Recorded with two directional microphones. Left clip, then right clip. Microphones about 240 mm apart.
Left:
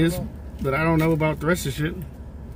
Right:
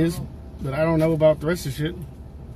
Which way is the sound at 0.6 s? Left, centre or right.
Centre.